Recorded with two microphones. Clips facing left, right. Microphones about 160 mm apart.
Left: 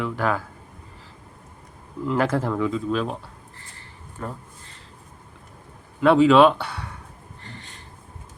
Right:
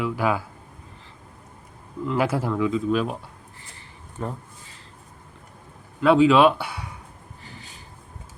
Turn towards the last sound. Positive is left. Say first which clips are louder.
# left 2 dB
turn(degrees=-5)  # may be behind; listen again after turning